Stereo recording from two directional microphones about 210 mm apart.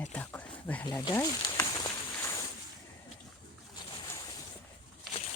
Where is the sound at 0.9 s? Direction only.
15° left (ahead or behind).